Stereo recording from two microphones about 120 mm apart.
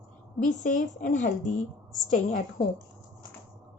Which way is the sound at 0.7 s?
90° left.